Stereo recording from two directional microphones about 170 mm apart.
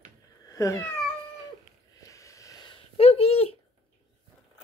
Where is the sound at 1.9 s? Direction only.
20° left (ahead or behind); by 3.5 s 35° left (ahead or behind).